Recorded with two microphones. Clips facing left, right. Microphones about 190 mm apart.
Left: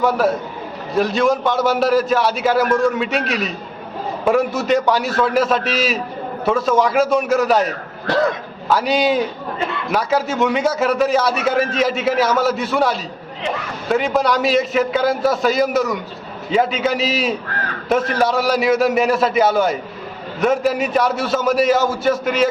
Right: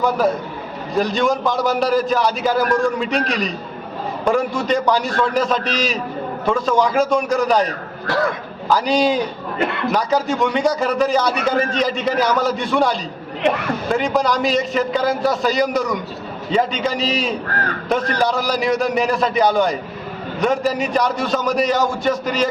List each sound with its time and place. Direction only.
0.0 s a man's voice: centre (ahead or behind)
8.0 s speech: 20° left (ahead or behind)
8.7 s a man's voice: 5° left (ahead or behind)
9.6 s a sound: 60° right (ahead or behind)
9.9 s a man's voice: 5° left (ahead or behind)